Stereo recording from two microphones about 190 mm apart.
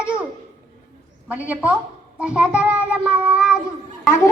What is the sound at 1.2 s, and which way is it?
A woman's voice, 10° right (ahead or behind).